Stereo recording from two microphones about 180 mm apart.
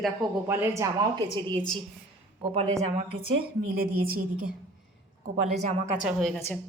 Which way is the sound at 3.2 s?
55° right (ahead or behind).